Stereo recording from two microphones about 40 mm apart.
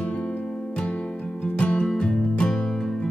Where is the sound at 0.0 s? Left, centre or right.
Left.